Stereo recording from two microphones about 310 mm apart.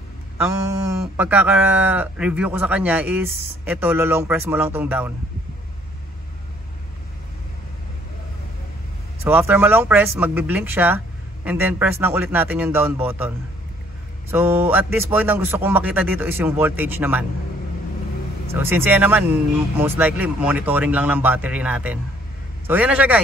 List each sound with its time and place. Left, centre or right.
0.7 s speech: centre
9.2 s speech: centre
14.3 s speech: centre
18.5 s speech: centre